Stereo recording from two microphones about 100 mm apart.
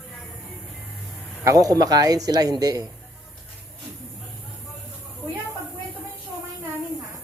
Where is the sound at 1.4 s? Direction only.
35° right (ahead or behind).